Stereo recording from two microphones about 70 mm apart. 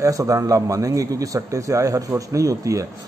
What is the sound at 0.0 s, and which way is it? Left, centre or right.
A man's voice, right.